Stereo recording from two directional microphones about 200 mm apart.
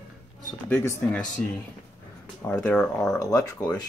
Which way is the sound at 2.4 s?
10° left (ahead or behind).